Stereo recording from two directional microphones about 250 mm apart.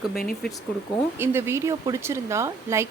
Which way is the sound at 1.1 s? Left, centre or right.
Centre.